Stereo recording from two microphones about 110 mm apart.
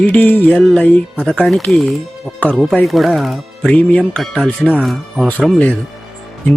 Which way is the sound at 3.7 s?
10° left (ahead or behind).